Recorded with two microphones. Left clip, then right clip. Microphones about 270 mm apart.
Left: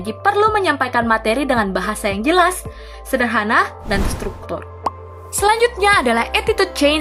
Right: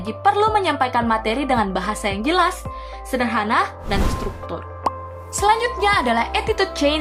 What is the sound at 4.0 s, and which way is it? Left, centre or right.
Speech, centre.